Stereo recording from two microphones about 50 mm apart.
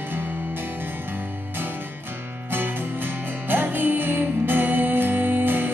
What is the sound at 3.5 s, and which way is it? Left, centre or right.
Music, right.